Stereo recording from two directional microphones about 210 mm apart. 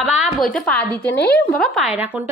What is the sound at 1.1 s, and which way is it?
Speech, 50° left (ahead or behind).